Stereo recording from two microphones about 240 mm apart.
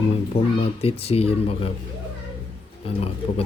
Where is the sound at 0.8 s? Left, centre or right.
Left.